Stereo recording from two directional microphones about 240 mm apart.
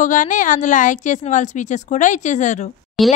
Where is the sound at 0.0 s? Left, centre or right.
Left.